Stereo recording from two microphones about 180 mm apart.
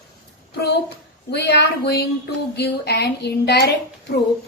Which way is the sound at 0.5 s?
65° left (ahead or behind).